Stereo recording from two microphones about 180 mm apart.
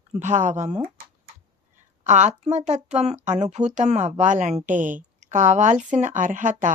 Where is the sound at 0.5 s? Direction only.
15° right (ahead or behind).